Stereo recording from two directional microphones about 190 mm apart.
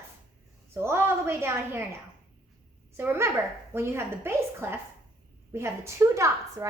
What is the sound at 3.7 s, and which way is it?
A woman's voice, 15° right (ahead or behind).